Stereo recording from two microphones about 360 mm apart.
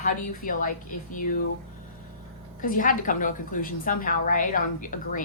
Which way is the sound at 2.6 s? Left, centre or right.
Left.